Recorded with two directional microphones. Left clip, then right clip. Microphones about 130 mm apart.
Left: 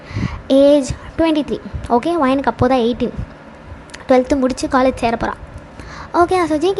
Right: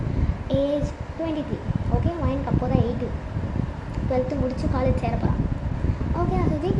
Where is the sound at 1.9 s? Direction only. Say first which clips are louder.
Left 15 dB; 70° left (ahead or behind).